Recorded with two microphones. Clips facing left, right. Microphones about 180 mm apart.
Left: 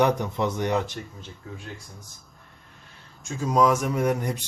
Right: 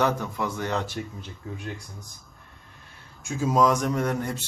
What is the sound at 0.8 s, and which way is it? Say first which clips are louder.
Speech: right 3 dB; 5° right (ahead or behind).